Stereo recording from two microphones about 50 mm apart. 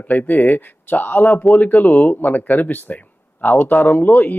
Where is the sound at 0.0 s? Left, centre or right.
Left.